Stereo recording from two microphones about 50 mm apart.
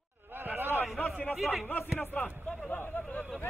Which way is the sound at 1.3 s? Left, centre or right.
Centre.